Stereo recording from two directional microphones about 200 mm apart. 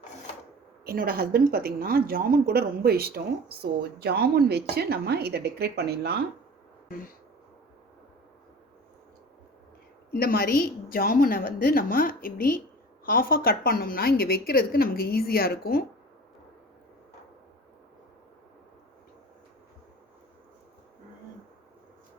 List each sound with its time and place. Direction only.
0.9 s a woman's voice: 50° right (ahead or behind)
10.1 s a woman's voice: 50° left (ahead or behind)